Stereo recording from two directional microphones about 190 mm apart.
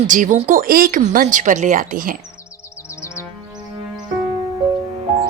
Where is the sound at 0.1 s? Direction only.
40° right (ahead or behind).